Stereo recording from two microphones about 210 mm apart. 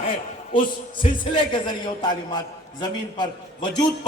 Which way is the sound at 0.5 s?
25° left (ahead or behind).